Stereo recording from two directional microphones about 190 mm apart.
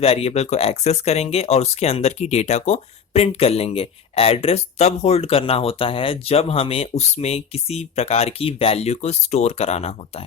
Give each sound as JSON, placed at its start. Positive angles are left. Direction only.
{"t": 0.0, "sound": "speech", "side_deg": 30}